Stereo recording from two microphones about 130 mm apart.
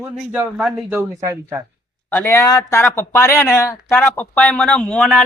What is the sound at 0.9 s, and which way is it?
Speech, 20° right (ahead or behind).